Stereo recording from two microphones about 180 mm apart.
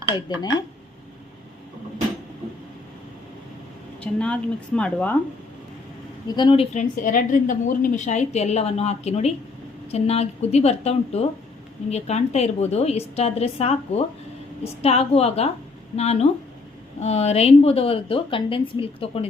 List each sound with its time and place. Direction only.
0.3 s a woman's voice: 25° left (ahead or behind)
4.0 s speech: 5° left (ahead or behind)
6.2 s a woman's voice: 25° left (ahead or behind)
6.7 s a woman's voice: 45° left (ahead or behind)